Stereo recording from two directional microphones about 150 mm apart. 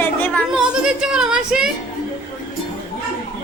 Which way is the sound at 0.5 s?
5° right (ahead or behind).